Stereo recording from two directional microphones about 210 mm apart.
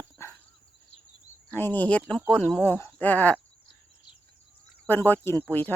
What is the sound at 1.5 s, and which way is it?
Speech, 10° left (ahead or behind).